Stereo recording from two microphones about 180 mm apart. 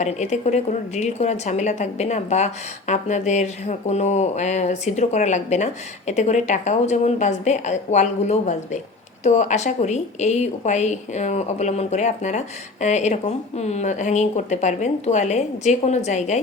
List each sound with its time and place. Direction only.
0.0 s a woman's voice: 40° left (ahead or behind)